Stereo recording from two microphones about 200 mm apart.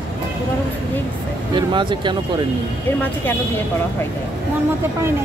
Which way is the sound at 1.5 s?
25° right (ahead or behind).